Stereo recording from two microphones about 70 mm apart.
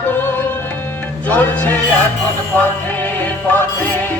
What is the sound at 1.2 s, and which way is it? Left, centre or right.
Music, left.